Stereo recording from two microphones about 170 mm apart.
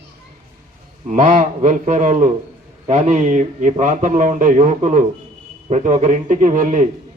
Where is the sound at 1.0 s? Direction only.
45° right (ahead or behind).